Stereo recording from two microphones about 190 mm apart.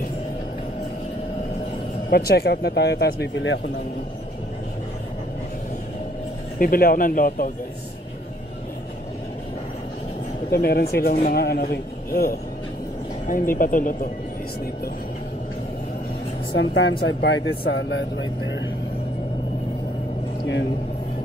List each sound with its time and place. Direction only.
2.0 s speech: 55° left (ahead or behind); by 3.6 s 70° left (ahead or behind)
6.6 s a man's voice: 50° left (ahead or behind)
10.5 s a man's voice: 55° left (ahead or behind)
16.5 s speech: 75° left (ahead or behind)